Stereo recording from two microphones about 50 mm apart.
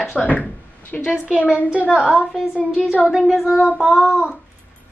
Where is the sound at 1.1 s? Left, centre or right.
Centre.